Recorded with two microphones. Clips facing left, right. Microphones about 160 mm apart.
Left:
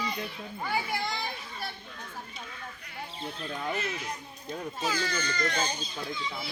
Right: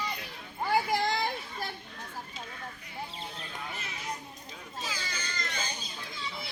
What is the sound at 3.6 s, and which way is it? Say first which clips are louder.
Speech: left 10 dB; 60° left (ahead or behind).